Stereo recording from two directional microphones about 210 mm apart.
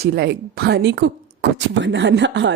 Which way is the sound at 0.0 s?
50° right (ahead or behind).